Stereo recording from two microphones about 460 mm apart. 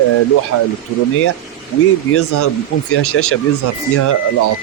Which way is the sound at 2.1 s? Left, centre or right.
Left.